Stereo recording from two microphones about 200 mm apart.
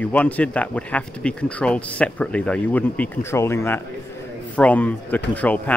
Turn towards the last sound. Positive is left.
turn(degrees=5)  # may be behind; listen again after turning